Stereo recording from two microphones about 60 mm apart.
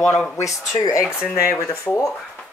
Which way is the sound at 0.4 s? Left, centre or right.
Left.